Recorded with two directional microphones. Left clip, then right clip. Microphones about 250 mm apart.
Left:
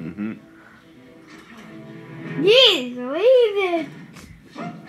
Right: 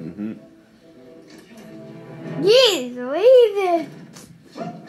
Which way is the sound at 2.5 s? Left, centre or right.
Centre.